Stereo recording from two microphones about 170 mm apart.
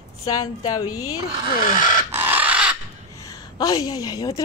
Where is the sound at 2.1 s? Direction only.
10° right (ahead or behind).